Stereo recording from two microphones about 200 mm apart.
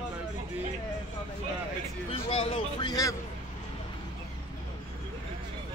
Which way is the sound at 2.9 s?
15° left (ahead or behind).